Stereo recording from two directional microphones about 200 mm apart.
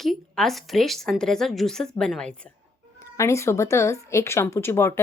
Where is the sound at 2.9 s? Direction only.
15° left (ahead or behind).